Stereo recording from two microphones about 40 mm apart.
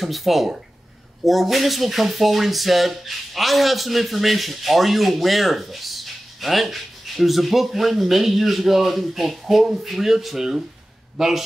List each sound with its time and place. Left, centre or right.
0.0 s speech: centre